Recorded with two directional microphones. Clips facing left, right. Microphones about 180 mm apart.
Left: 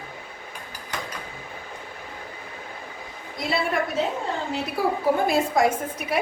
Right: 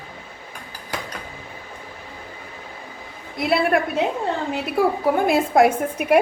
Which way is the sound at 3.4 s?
60° right (ahead or behind).